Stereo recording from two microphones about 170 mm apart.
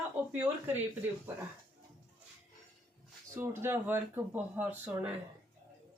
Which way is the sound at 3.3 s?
15° right (ahead or behind).